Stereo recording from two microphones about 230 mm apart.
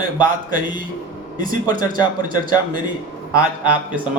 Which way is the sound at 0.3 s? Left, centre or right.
Right.